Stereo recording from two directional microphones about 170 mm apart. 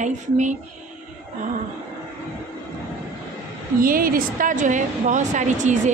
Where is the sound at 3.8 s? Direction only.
55° right (ahead or behind).